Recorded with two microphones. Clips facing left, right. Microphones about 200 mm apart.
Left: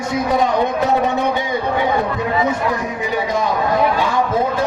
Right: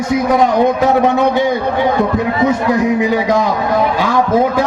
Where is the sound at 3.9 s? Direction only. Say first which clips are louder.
Right 4 dB; 90° right.